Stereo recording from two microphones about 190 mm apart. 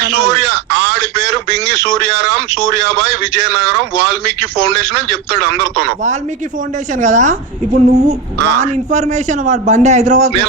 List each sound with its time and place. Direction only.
0.0 s speech: 65° right (ahead or behind)
7.0 s a man's voice: 40° right (ahead or behind)